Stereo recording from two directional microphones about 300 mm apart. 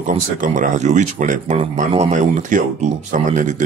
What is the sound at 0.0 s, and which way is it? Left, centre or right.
Speech, right.